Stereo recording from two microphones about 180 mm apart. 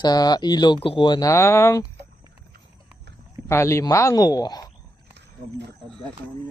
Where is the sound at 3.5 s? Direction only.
15° left (ahead or behind).